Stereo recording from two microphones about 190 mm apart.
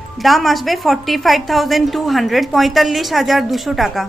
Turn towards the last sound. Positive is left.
turn(degrees=0)  # may be behind; listen again after turning